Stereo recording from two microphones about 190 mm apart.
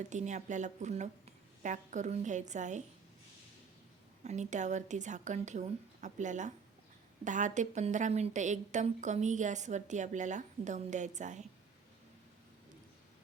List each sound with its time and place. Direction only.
0.1 s a woman's voice: 40° right (ahead or behind)
4.2 s a woman's voice: 40° right (ahead or behind)